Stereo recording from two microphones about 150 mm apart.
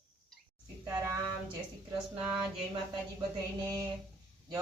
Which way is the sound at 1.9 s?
5° right (ahead or behind).